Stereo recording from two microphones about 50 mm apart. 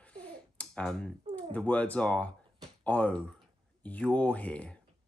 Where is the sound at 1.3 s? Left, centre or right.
Left.